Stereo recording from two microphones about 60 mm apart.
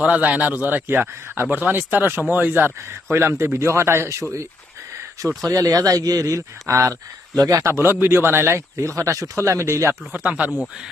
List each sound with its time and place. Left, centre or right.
0.0 s speech: right
5.4 s speech: right
7.3 s speech: right
7.7 s speech: right
10.1 s speech: right